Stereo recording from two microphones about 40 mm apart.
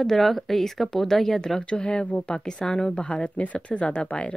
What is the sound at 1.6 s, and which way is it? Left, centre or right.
Speech, left.